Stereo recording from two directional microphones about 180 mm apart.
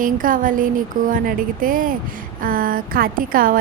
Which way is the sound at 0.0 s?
50° right (ahead or behind).